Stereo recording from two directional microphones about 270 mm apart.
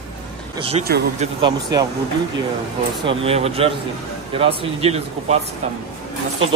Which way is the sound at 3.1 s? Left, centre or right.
Right.